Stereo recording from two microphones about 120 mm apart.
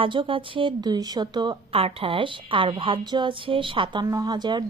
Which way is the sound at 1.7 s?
50° right (ahead or behind).